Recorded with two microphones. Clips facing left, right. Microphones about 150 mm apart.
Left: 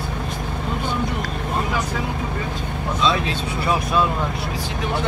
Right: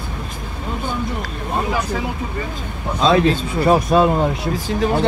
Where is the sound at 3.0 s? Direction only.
45° right (ahead or behind).